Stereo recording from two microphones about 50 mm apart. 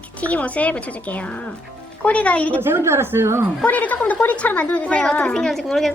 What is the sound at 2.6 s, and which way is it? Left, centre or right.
Speech, right.